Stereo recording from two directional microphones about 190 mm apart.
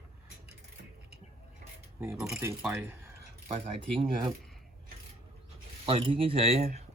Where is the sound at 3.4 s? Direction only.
30° right (ahead or behind).